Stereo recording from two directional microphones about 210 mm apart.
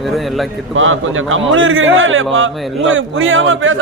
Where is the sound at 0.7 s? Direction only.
70° right (ahead or behind).